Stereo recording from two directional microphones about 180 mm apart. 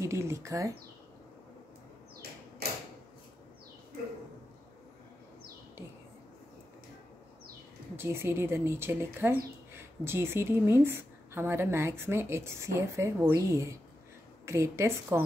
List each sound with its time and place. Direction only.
0.0 s a woman's voice: 15° right (ahead or behind)
7.9 s a woman's voice: 15° right (ahead or behind)